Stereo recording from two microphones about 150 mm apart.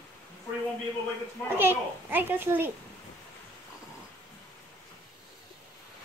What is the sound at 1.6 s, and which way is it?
A child's voice, 15° right (ahead or behind).